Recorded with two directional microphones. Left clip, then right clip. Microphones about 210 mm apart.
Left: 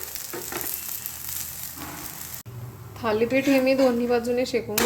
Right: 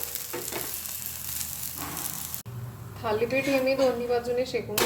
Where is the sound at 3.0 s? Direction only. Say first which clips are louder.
Left 4 dB; 30° left (ahead or behind).